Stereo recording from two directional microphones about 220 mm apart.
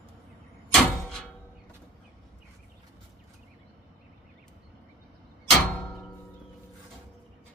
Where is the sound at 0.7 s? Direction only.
5° left (ahead or behind).